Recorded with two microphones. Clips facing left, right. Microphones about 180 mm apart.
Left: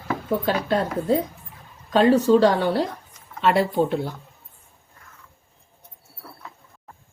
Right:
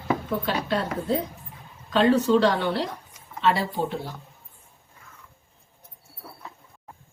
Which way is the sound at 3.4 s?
60° left (ahead or behind).